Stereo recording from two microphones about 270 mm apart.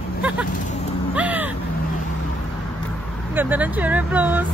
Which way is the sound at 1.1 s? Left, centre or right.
Centre.